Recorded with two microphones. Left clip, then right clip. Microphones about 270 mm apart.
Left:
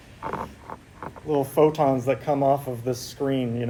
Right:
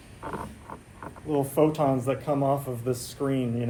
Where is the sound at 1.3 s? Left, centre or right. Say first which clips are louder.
Left 4 dB; centre.